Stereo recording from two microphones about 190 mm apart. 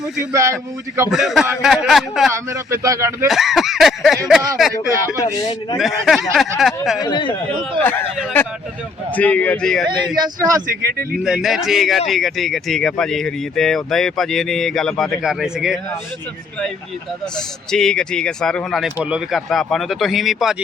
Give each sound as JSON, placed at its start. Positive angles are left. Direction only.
{"t": 1.1, "sound": "speech", "side_deg": 0}
{"t": 2.3, "sound": "speech", "side_deg": -15}
{"t": 3.2, "sound": "speech", "side_deg": 0}
{"t": 4.9, "sound": "speech", "side_deg": -15}
{"t": 5.7, "sound": "speech", "side_deg": 0}
{"t": 7.0, "sound": "speech", "side_deg": 25}
{"t": 7.8, "sound": "speech", "side_deg": 10}
{"t": 9.1, "sound": "speech", "side_deg": 10}
{"t": 10.2, "sound": "speech", "side_deg": -15}
{"t": 10.7, "sound": "speech", "side_deg": -50}
{"t": 11.2, "sound": "speech", "side_deg": -5}
{"t": 17.3, "sound": "speech", "side_deg": 5}